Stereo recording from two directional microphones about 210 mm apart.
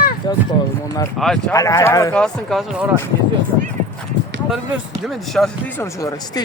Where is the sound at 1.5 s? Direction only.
15° left (ahead or behind).